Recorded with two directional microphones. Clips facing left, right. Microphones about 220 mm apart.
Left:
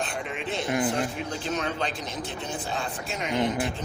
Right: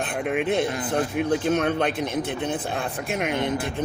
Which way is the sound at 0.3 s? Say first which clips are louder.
Right 9 dB; 60° right (ahead or behind).